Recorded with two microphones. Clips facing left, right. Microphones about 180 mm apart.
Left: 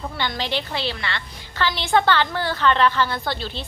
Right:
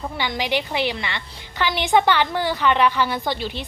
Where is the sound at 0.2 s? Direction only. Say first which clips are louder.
Right 3 dB; 15° right (ahead or behind).